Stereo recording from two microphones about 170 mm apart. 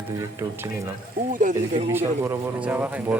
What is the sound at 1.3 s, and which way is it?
Speech, 50° right (ahead or behind).